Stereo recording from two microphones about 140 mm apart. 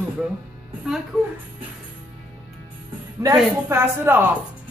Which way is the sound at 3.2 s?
25° right (ahead or behind).